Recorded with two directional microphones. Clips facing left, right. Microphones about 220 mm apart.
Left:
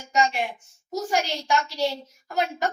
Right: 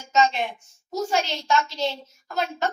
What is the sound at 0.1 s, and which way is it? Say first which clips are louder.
A woman's voice: right 2 dB; 10° left (ahead or behind).